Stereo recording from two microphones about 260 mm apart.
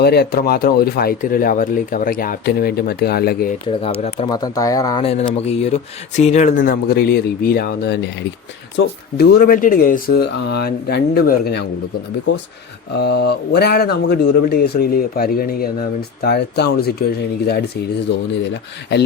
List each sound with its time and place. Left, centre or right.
0.0 s speech: left
4.0 s speech: centre
6.6 s speech: left
9.1 s speech: left
13.0 s speech: left